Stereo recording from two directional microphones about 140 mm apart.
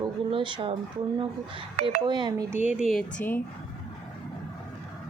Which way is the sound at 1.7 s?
50° right (ahead or behind).